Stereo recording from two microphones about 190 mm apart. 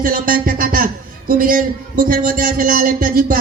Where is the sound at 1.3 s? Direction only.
45° right (ahead or behind).